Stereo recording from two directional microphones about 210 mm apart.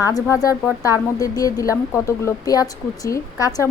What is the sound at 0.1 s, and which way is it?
A woman's voice, 15° left (ahead or behind).